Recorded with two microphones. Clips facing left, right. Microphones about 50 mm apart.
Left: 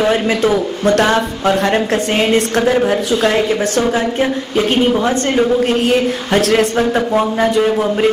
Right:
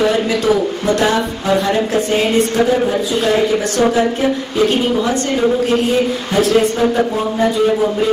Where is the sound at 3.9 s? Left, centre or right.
Left.